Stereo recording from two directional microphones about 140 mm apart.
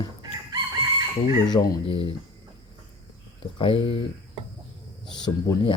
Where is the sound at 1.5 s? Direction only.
30° left (ahead or behind).